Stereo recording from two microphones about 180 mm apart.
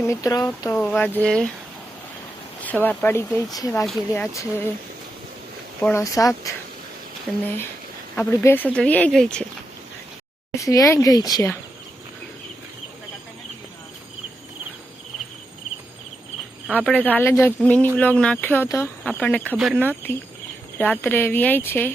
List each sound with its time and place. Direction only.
0.0 s speech: 15° left (ahead or behind)
2.6 s speech: 10° left (ahead or behind)
5.8 s speech: 15° left (ahead or behind)
7.3 s speech: 5° left (ahead or behind)
10.6 s speech: 15° left (ahead or behind)
16.7 s speech: 10° left (ahead or behind)
19.5 s speech: 5° right (ahead or behind)
19.8 s speech: 10° left (ahead or behind)